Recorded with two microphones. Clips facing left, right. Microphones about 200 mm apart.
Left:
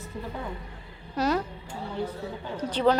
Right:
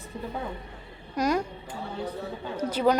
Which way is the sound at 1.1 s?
10° right (ahead or behind).